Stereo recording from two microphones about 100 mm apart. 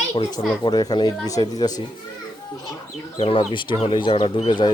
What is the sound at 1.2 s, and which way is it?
Speech, 35° left (ahead or behind).